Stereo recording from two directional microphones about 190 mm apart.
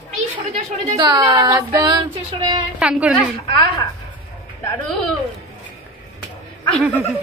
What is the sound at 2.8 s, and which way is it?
Speech, 5° right (ahead or behind).